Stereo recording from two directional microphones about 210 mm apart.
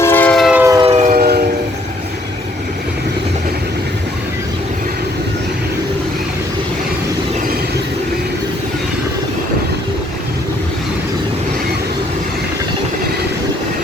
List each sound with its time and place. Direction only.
0.0 s siren: 10° left (ahead or behind)
0.6 s train: 15° right (ahead or behind)
0.9 s train: 35° right (ahead or behind)